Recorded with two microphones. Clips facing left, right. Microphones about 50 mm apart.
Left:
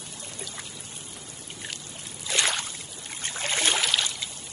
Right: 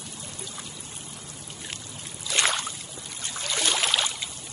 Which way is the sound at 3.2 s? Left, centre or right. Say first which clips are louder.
Left 2 dB; left.